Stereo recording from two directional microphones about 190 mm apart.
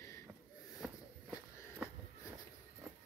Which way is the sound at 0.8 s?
5° right (ahead or behind).